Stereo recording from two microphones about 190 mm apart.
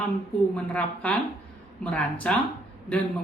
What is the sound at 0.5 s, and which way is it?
A man's voice, 5° left (ahead or behind).